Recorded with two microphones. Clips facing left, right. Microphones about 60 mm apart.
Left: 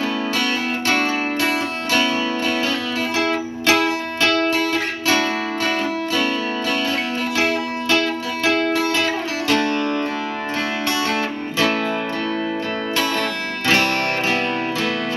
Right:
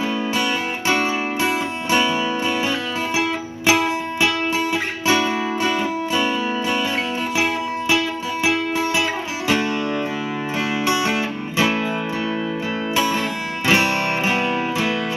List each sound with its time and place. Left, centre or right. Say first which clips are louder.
0.0 s music: even; centre
9.5 s music: left 1 dB; centre
12.9 s music: right 1 dB; centre